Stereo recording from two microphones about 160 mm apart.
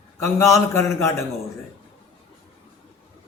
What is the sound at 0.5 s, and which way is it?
Speech, 15° left (ahead or behind).